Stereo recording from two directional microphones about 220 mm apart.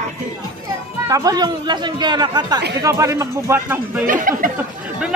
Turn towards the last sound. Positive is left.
turn(degrees=-40)  # may be behind; listen again after turning